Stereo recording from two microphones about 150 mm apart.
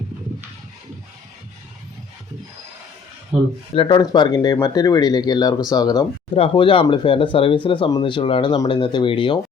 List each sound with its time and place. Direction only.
3.8 s speech: 30° left (ahead or behind)